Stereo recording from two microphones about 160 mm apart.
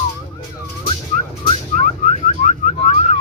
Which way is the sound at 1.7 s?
50° left (ahead or behind).